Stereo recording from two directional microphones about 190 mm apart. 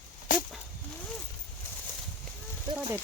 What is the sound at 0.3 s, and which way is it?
Goat, 45° left (ahead or behind).